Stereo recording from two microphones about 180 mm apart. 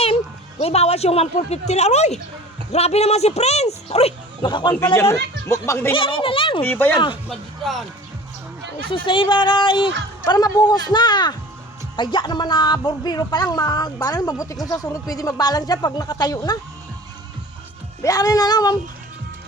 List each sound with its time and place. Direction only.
0.6 s speech: 35° left (ahead or behind)
4.9 s speech: 15° left (ahead or behind)
5.9 s speech: 30° left (ahead or behind)
6.6 s speech: 10° left (ahead or behind)
7.0 s speech: 30° left (ahead or behind)
7.6 s speech: centre (ahead or behind)
8.9 s speech: 30° left (ahead or behind)
18.0 s speech: 20° left (ahead or behind)